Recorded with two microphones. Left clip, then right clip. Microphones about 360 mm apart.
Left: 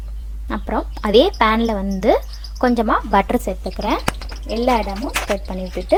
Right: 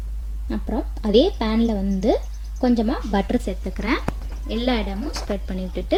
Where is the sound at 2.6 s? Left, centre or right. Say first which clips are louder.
Left 5 dB; left.